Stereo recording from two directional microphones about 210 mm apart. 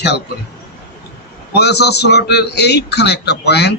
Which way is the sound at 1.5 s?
50° left (ahead or behind).